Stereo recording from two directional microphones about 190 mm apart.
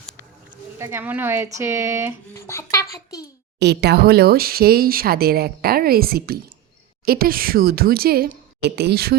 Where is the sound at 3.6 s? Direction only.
60° right (ahead or behind).